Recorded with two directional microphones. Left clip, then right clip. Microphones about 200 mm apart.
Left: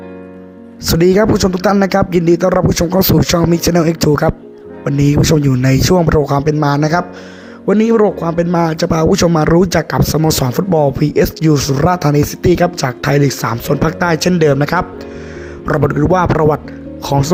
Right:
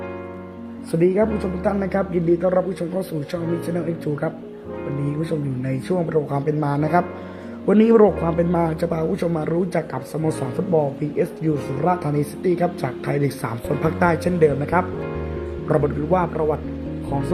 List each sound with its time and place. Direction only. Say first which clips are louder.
0.9 s speech: left 8 dB; 30° left (ahead or behind)
7.7 s speech: left 3 dB; 15° left (ahead or behind); by 16.6 s 35° left (ahead or behind)